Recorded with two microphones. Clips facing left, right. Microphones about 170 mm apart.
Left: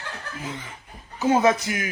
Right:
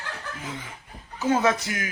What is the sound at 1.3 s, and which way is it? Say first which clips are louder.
Speech: left 3 dB; 15° left (ahead or behind).